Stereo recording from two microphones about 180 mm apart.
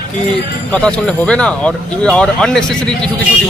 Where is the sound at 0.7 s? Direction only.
5° left (ahead or behind).